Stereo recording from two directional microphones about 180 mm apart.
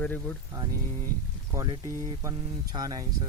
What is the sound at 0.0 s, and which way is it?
Speech, 10° left (ahead or behind).